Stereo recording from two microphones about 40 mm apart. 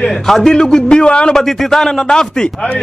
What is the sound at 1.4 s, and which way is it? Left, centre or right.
Speech, centre.